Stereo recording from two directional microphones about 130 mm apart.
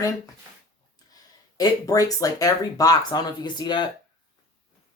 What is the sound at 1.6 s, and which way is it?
Speech, 30° left (ahead or behind).